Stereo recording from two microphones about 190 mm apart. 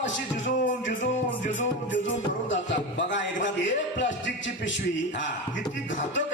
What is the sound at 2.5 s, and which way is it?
Speech, 70° left (ahead or behind).